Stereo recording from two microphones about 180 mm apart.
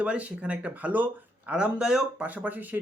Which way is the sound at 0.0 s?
5° right (ahead or behind).